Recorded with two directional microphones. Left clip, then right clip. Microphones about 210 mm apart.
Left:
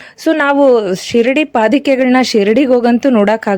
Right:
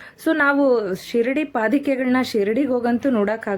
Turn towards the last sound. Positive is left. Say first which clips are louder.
# left 10 dB
turn(degrees=40)  # may be behind; listen again after turning